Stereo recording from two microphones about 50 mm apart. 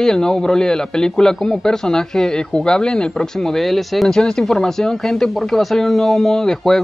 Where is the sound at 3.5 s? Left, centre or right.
Centre.